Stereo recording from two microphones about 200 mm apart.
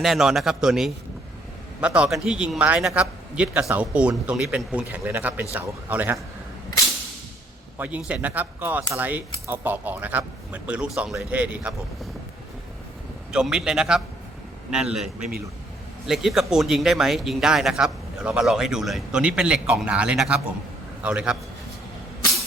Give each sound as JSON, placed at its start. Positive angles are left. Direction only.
{"t": 0.0, "sound": "a man's voice", "side_deg": 0}
{"t": 7.8, "sound": "speech", "side_deg": -5}
{"t": 13.3, "sound": "a man's voice", "side_deg": -5}